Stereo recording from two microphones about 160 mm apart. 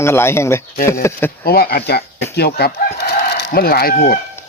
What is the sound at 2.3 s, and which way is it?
Chicken, 85° left.